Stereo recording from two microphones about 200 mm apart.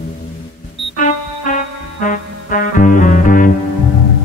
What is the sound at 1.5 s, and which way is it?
Music, 40° left (ahead or behind).